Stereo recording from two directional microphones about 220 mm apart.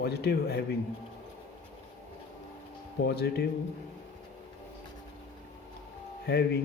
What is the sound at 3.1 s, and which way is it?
Speech, 45° left (ahead or behind).